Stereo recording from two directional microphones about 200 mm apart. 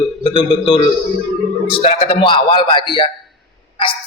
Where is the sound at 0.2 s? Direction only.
25° left (ahead or behind).